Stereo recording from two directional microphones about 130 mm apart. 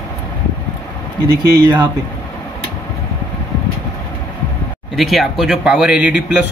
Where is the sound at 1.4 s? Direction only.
35° right (ahead or behind).